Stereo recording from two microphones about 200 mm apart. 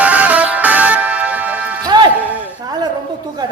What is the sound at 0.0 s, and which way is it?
Music, 5° right (ahead or behind).